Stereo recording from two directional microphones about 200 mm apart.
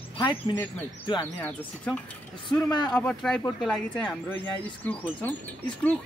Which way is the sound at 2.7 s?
20° left (ahead or behind).